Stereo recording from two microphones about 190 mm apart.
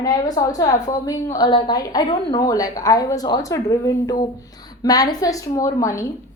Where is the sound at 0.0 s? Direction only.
20° left (ahead or behind).